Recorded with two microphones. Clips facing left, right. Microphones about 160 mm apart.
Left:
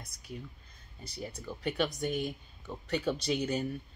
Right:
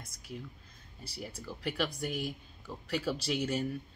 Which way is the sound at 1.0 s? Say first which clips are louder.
Left 2 dB; 5° right (ahead or behind).